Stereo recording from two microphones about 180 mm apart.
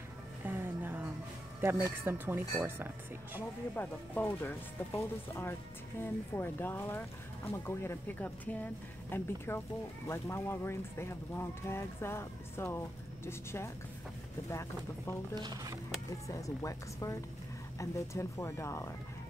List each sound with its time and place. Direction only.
0.4 s music: 10° right (ahead or behind)
1.6 s speech: 15° right (ahead or behind)
3.7 s speech: 10° left (ahead or behind)
15.3 s speech: 20° right (ahead or behind)
16.3 s speech: 20° left (ahead or behind)